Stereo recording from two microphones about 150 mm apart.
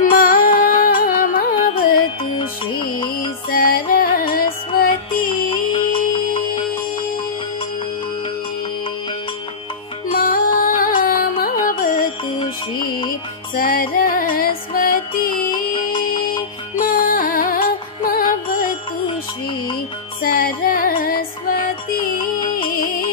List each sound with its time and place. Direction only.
0.0 s music: 65° left (ahead or behind)
2.3 s music: 30° left (ahead or behind)
3.4 s music: 85° left
5.5 s music: 35° left (ahead or behind)
10.1 s music: 70° left (ahead or behind)
12.4 s music: 30° left (ahead or behind)
13.6 s music: 75° left (ahead or behind)
15.5 s music: 30° left (ahead or behind)
16.7 s music: 70° left (ahead or behind)
20.2 s music: 75° left (ahead or behind)